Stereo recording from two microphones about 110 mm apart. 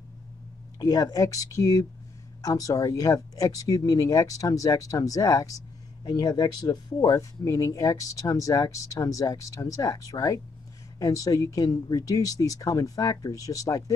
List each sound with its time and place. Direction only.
0.7 s speech: 35° left (ahead or behind)